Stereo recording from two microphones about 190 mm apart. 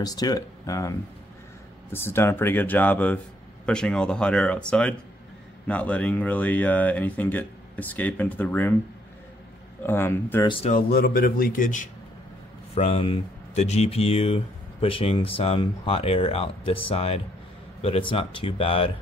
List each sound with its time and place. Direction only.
0.0 s speech: 20° left (ahead or behind)
9.8 s speech: 10° left (ahead or behind)
10.4 s speech: 25° left (ahead or behind)
10.7 s speech: 50° left (ahead or behind)
12.7 s speech: 30° left (ahead or behind)